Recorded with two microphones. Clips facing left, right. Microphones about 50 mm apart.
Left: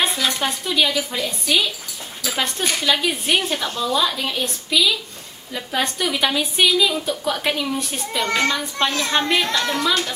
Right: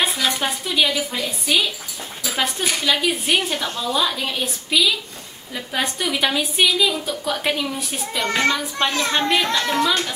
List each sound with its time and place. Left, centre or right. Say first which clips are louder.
0.0 s a woman's voice: even; centre
4.7 s a child's voice: even; centre
5.5 s a woman's voice: left 1 dB; centre
9.1 s a woman's voice: even; centre